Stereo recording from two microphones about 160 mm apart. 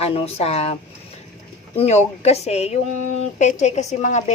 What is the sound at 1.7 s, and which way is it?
A woman's voice, 45° left (ahead or behind).